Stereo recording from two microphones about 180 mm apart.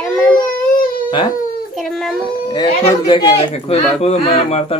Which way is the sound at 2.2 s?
25° left (ahead or behind).